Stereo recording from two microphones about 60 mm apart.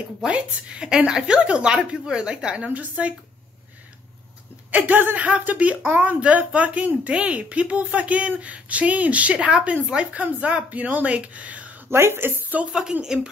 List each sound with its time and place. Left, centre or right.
0.3 s a woman's voice: centre
4.6 s speech: right
11.9 s a woman's voice: right
13.0 s a woman's voice: centre